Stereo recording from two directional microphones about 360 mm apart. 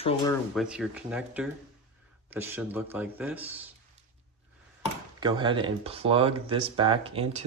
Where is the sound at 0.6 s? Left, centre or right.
Centre.